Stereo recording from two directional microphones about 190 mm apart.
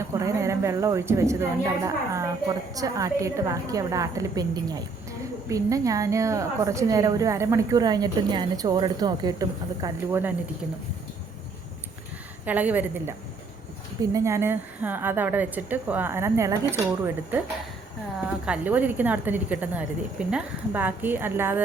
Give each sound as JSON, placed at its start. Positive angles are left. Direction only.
{"t": 0.1, "sound": "a woman's voice", "side_deg": -15}
{"t": 12.5, "sound": "a woman's voice", "side_deg": -10}
{"t": 18.2, "sound": "a woman's voice", "side_deg": -5}